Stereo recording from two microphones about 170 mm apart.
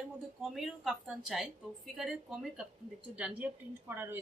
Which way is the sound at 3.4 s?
10° right (ahead or behind).